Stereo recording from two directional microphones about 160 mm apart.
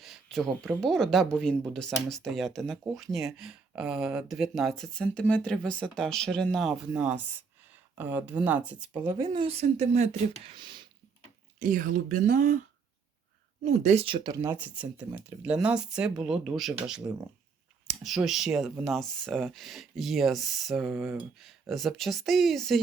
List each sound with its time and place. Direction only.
0.0 s a sound: centre (ahead or behind)
0.8 s speech: 5° left (ahead or behind)
8.9 s speech: 20° right (ahead or behind); by 10.1 s 45° right (ahead or behind)
10.4 s speech: 30° right (ahead or behind)
11.6 s speech: 55° right (ahead or behind)
13.7 s speech: 45° right (ahead or behind)
14.3 s speech: 15° right (ahead or behind); by 22.8 s centre (ahead or behind)